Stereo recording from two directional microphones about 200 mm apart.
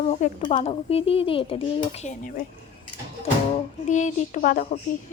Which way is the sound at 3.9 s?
35° left (ahead or behind).